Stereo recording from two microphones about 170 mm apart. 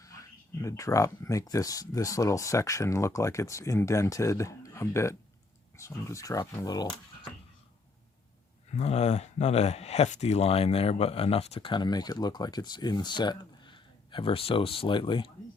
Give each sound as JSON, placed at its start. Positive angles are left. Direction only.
{"t": 0.0, "sound": "speech", "side_deg": 20}
{"t": 8.7, "sound": "speech", "side_deg": 40}